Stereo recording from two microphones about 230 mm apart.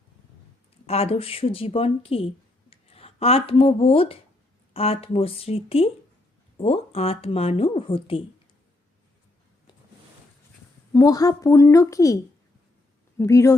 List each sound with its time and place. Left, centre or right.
0.9 s speech: left
10.9 s a woman's voice: centre